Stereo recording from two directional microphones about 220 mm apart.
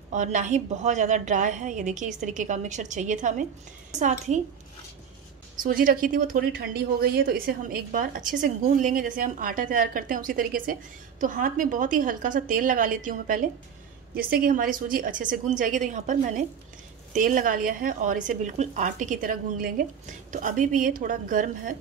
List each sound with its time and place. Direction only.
0.1 s a woman's voice: 35° right (ahead or behind)
5.6 s a woman's voice: 40° right (ahead or behind)